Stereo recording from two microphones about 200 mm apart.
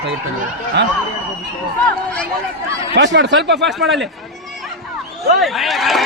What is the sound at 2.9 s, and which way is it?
Speech, 60° right (ahead or behind).